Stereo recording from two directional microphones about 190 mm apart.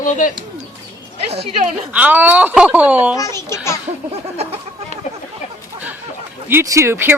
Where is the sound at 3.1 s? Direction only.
15° left (ahead or behind).